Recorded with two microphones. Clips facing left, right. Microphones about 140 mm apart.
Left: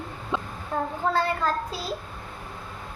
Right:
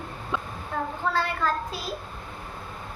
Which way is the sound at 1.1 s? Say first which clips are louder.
Left 2 dB; 40° left (ahead or behind).